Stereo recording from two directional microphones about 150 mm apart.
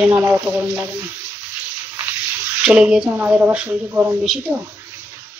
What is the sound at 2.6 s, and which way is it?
A woman's voice, 5° right (ahead or behind).